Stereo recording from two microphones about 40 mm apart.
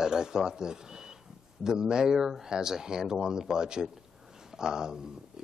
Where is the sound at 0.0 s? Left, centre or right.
Centre.